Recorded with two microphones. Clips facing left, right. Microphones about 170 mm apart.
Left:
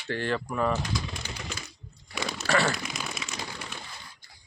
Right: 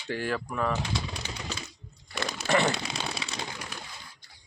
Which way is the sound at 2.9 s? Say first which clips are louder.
Right 2 dB; 30° right (ahead or behind).